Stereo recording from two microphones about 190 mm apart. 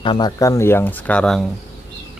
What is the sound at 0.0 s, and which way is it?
Speech, 25° left (ahead or behind).